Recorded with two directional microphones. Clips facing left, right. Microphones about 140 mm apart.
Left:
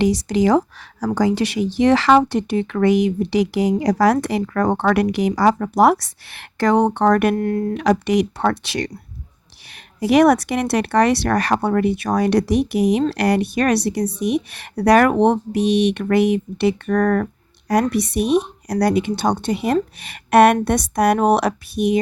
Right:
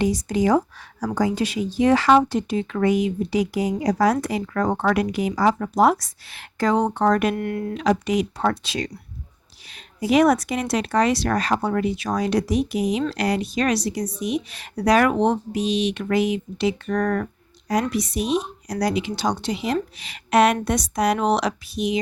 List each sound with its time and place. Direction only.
0.0 s speech: 85° left; by 7.3 s 65° left (ahead or behind)
7.3 s speech: 35° left (ahead or behind)
7.7 s speech: 65° left (ahead or behind); by 17.2 s 50° left (ahead or behind)
17.9 s speech: 60° left (ahead or behind)